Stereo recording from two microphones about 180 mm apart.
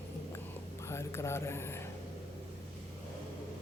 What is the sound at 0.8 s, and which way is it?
Speech, 15° left (ahead or behind).